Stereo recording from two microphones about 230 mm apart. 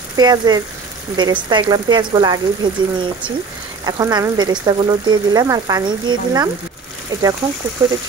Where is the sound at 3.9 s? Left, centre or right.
Centre.